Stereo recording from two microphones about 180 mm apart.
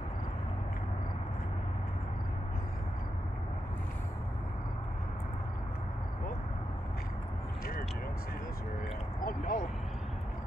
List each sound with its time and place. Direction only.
9.2 s speech: 50° left (ahead or behind)